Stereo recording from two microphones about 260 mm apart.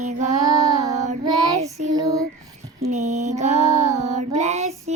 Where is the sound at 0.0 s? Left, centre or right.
Right.